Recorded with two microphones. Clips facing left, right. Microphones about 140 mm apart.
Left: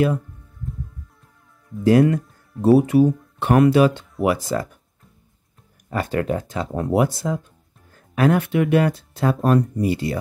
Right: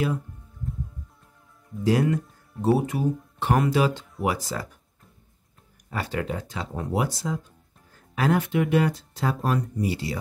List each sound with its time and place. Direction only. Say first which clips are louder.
1.9 s speech: left 7 dB; 60° left (ahead or behind)
5.9 s speech: left 7 dB; 50° left (ahead or behind)
6.7 s speech: left 7 dB; 65° left (ahead or behind)